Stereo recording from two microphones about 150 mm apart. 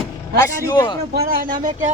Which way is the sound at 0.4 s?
25° left (ahead or behind).